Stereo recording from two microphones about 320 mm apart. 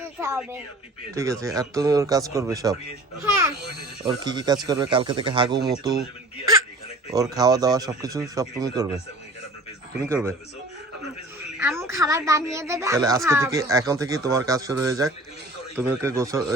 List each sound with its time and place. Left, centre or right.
0.2 s a woman's voice: centre
4.2 s a woman's voice: centre
7.1 s a woman's voice: centre
10.0 s a woman's voice: centre
11.6 s a woman's voice: centre